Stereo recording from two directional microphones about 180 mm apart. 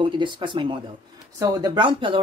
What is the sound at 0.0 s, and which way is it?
Speech, 25° right (ahead or behind).